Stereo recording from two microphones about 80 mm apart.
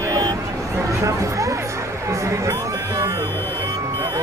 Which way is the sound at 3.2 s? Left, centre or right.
Left.